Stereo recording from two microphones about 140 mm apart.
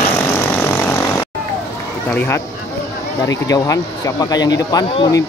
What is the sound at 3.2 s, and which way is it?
Speech, 25° left (ahead or behind).